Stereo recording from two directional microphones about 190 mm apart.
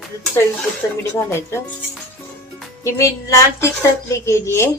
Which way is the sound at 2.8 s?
15° left (ahead or behind).